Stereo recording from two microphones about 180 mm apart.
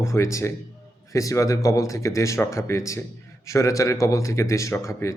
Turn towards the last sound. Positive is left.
turn(degrees=15)  # may be behind; listen again after turning